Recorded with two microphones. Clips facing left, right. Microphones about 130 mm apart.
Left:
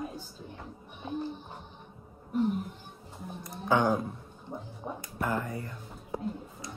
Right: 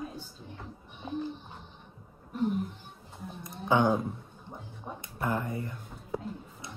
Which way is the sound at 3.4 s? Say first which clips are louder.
Right 1 dB; 20° right (ahead or behind).